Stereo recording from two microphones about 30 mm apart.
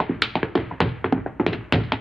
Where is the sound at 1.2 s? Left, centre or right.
Centre.